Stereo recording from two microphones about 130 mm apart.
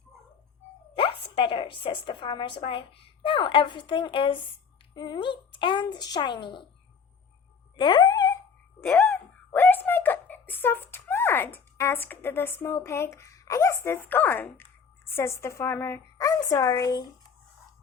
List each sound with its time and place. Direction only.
1.4 s a woman's voice: 40° left (ahead or behind)
7.8 s speech: 35° left (ahead or behind)
8.8 s speech: 15° left (ahead or behind)